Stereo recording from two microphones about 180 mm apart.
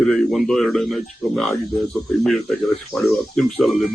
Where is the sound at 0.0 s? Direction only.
Centre (ahead or behind).